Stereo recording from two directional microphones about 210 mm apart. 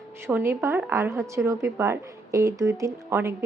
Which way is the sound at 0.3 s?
10° right (ahead or behind).